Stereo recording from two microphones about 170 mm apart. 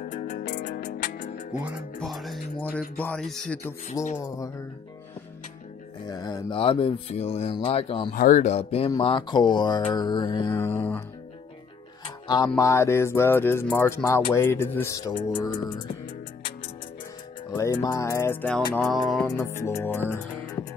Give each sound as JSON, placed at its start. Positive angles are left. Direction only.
{"t": 0.0, "sound": "music", "side_deg": 45}
{"t": 0.8, "sound": "music", "side_deg": 60}
{"t": 2.0, "sound": "speech", "side_deg": 0}
{"t": 4.0, "sound": "mantra", "side_deg": 20}
{"t": 6.0, "sound": "speech", "side_deg": 25}
{"t": 8.1, "sound": "speech", "side_deg": 55}
{"t": 8.9, "sound": "mantra", "side_deg": 30}
{"t": 10.5, "sound": "music", "side_deg": 15}
{"t": 12.5, "sound": "music", "side_deg": 15}
{"t": 15.2, "sound": "mantra", "side_deg": 20}
{"t": 17.6, "sound": "music", "side_deg": 15}
{"t": 18.8, "sound": "speech", "side_deg": 0}
{"t": 19.2, "sound": "music", "side_deg": 15}